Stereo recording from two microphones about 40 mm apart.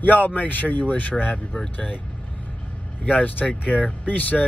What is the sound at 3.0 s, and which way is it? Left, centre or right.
Speech, left.